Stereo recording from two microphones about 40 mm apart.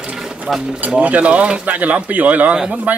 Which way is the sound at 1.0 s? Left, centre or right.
Right.